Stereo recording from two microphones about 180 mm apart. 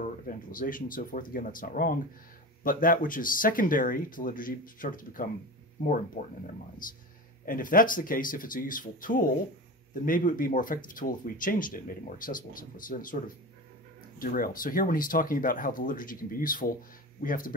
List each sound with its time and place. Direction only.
0.0 s speech: 50° left (ahead or behind)